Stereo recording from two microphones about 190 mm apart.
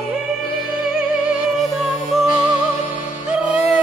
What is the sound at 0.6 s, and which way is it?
Music, 50° left (ahead or behind).